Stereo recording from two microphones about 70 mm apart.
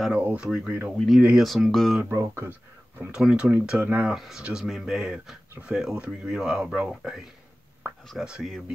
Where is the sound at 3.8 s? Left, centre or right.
Right.